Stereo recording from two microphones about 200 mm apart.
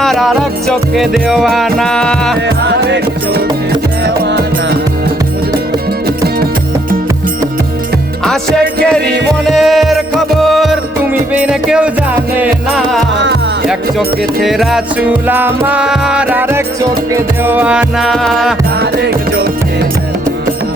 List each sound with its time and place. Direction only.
0.0 s music: centre (ahead or behind)
2.6 s music: 55° right (ahead or behind)
8.2 s music: centre (ahead or behind)
14.4 s music: centre (ahead or behind)
18.8 s music: 55° right (ahead or behind)